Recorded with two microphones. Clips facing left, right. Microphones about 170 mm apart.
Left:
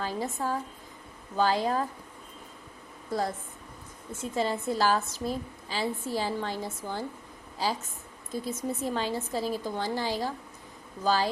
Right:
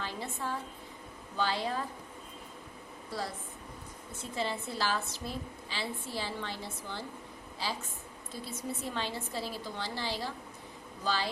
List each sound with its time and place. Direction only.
0.0 s a woman's voice: 40° left (ahead or behind)
3.1 s a woman's voice: 45° left (ahead or behind)
8.3 s a woman's voice: 45° left (ahead or behind)